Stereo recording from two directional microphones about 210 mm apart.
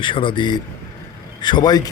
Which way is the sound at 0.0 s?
25° left (ahead or behind).